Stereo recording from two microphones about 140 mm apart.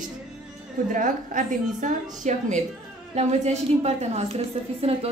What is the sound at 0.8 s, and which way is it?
A woman's voice, 70° right (ahead or behind).